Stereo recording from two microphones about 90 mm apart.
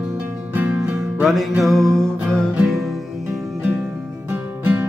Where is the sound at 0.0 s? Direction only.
20° right (ahead or behind).